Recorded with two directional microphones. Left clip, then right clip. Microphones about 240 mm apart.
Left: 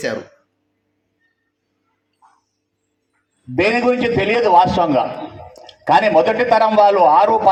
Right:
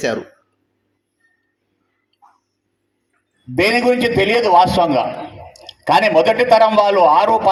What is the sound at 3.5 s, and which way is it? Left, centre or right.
A man's voice, right.